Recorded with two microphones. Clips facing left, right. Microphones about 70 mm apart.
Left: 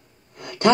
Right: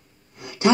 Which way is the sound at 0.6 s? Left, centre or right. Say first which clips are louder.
Left 1 dB; left.